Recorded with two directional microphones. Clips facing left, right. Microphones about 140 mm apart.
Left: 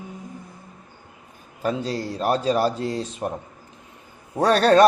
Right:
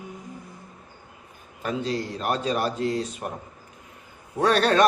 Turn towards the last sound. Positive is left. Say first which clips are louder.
# left 4 dB
turn(degrees=40)  # may be behind; listen again after turning